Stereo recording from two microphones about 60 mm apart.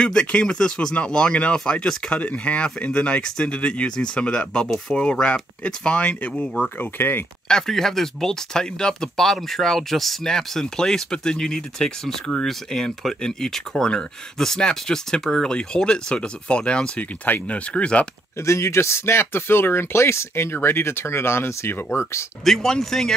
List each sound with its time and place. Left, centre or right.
0.0 s speech: centre
4.6 s speech: centre
5.2 s speech: centre
7.0 s speech: left
7.4 s speech: centre
18.4 s speech: left
22.4 s speech: centre